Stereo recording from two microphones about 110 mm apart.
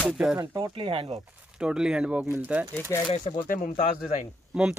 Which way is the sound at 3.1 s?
50° left (ahead or behind).